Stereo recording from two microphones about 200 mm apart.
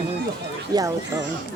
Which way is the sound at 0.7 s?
20° right (ahead or behind).